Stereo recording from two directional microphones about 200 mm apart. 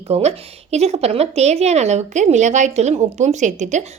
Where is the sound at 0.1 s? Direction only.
35° right (ahead or behind).